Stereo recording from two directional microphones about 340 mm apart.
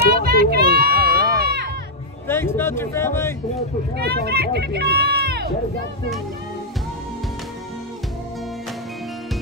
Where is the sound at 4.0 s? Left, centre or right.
Right.